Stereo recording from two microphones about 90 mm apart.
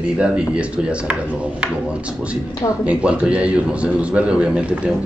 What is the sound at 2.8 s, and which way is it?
Speech, 10° right (ahead or behind).